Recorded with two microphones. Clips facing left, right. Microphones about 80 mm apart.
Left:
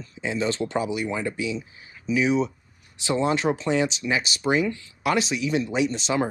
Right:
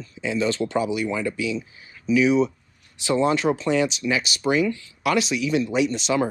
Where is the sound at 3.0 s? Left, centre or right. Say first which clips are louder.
Right 2 dB; left.